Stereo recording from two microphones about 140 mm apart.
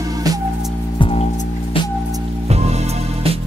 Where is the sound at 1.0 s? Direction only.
45° left (ahead or behind).